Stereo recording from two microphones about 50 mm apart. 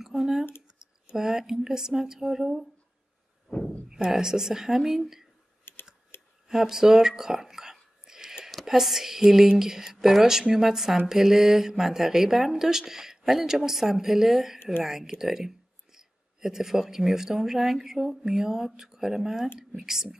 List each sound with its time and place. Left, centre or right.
0.0 s a sound: centre
1.1 s speech: centre
3.4 s a sound: centre
3.9 s speech: centre
5.7 s typing: left
6.4 s whispering: centre
8.6 s speech: centre